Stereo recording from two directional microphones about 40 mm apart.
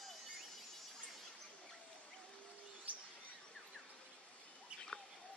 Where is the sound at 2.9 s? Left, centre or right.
Right.